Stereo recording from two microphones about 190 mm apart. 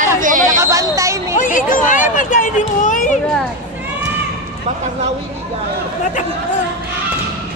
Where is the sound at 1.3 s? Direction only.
45° left (ahead or behind).